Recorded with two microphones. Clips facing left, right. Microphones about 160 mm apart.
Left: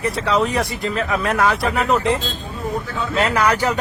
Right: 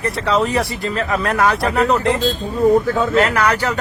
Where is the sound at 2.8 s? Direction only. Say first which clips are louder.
Right 8 dB; 45° right (ahead or behind).